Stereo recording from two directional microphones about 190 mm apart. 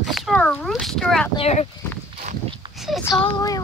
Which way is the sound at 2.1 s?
30° right (ahead or behind).